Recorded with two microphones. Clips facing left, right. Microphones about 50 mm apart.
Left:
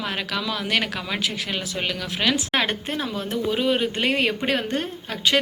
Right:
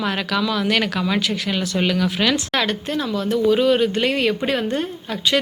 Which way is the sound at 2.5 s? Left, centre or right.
Left.